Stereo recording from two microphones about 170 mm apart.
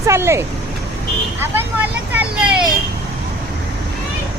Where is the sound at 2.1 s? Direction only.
10° right (ahead or behind).